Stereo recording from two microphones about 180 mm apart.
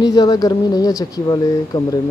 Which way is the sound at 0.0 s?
20° left (ahead or behind).